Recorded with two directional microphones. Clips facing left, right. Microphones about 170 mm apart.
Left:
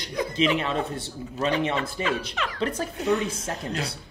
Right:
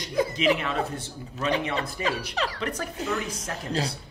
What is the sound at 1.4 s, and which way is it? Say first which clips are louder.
Speech: left 2 dB; 35° left (ahead or behind).